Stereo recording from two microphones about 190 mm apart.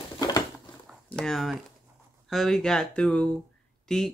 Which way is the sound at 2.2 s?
Centre (ahead or behind).